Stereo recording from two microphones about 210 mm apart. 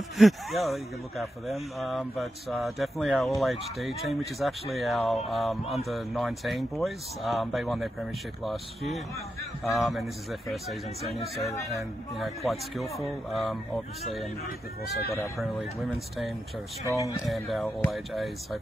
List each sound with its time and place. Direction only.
0.2 s speech: centre (ahead or behind)
11.7 s speech: centre (ahead or behind)
15.9 s speech: centre (ahead or behind)
16.8 s speech: 15° right (ahead or behind)
17.3 s speech: centre (ahead or behind)